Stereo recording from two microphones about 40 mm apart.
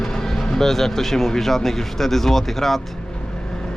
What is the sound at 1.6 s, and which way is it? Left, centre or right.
Speech, centre.